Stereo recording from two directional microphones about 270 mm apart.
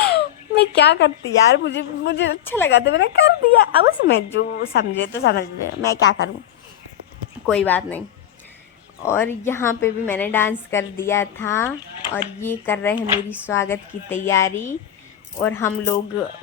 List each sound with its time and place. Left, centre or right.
0.0 s speech: left
2.4 s a woman's voice: centre
2.6 s speech: left
7.4 s speech: centre
9.0 s a woman's voice: centre
13.0 s speech: centre
13.5 s a woman's voice: centre